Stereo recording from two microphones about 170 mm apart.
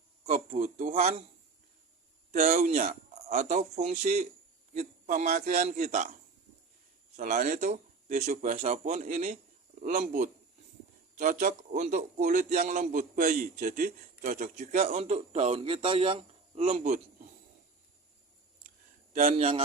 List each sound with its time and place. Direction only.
0.3 s a man's voice: 45° right (ahead or behind)
2.3 s a man's voice: 40° right (ahead or behind)
7.2 s speech: 45° right (ahead or behind)
13.1 s a man's voice: 60° right (ahead or behind); by 16.8 s 35° right (ahead or behind)
19.1 s a man's voice: 45° right (ahead or behind)